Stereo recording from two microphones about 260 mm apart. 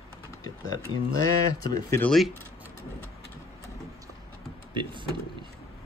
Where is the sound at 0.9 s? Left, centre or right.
Right.